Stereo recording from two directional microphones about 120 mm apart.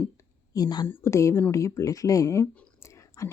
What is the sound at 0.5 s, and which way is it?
Speech, 30° left (ahead or behind).